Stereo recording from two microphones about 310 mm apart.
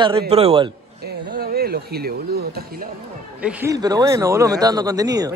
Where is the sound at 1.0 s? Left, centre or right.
Right.